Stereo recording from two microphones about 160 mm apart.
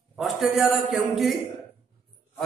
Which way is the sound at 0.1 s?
Centre (ahead or behind).